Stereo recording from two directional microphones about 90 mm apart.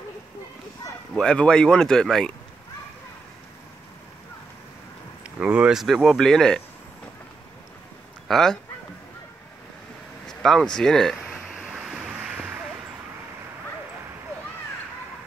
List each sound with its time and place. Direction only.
1.1 s speech: 10° left (ahead or behind)
5.2 s speech: 15° right (ahead or behind); by 6.6 s 5° left (ahead or behind)
8.3 s speech: 5° left (ahead or behind)
10.2 s speech: 5° left (ahead or behind)
11.3 s waves: 5° right (ahead or behind)